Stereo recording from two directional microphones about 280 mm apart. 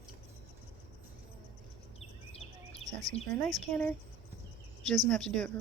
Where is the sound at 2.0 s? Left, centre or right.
Left.